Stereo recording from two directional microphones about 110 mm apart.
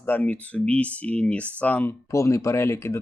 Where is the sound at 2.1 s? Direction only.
25° left (ahead or behind).